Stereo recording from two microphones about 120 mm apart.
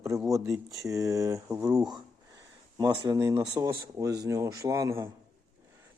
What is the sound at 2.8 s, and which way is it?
Speech, 35° right (ahead or behind).